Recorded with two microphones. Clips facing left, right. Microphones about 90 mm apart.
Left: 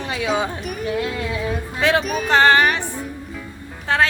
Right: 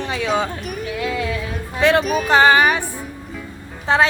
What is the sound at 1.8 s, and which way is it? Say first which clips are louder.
Speech: right 3 dB; centre (ahead or behind).